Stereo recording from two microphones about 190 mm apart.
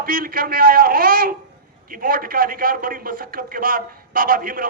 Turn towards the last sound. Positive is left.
turn(degrees=-50)  # may be behind; listen again after turning